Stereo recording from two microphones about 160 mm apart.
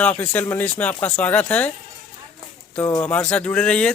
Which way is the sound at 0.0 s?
10° left (ahead or behind).